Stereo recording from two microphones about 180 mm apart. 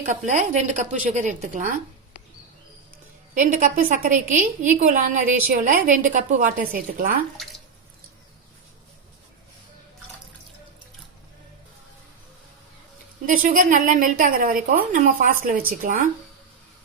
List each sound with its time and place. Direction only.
0.3 s a woman's voice: 40° right (ahead or behind)
3.3 s a woman's voice: 45° right (ahead or behind)
13.2 s a woman's voice: 50° right (ahead or behind)